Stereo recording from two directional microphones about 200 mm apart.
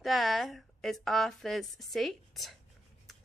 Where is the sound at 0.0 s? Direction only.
Centre (ahead or behind).